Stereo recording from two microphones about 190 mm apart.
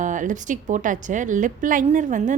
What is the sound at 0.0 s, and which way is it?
A woman's voice, 40° right (ahead or behind).